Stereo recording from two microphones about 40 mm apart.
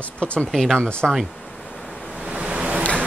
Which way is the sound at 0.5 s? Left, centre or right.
Centre.